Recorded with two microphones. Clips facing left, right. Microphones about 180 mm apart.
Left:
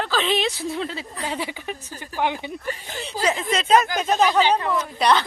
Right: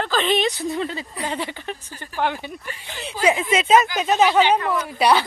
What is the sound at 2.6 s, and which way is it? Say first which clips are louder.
Speech: left 5 dB; 45° left (ahead or behind).